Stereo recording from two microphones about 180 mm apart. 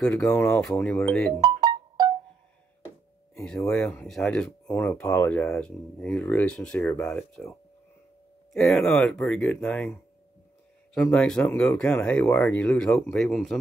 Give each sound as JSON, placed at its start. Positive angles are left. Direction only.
{"t": 0.0, "sound": "speech", "side_deg": 5}
{"t": 1.4, "sound": "music", "side_deg": -25}
{"t": 3.6, "sound": "speech", "side_deg": 5}
{"t": 8.5, "sound": "speech", "side_deg": 5}
{"t": 11.0, "sound": "speech", "side_deg": 5}